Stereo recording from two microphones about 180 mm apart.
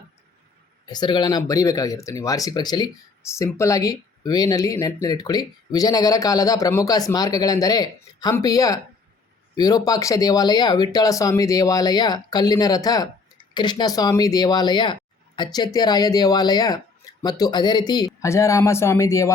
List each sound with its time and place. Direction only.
0.9 s speech: 25° left (ahead or behind)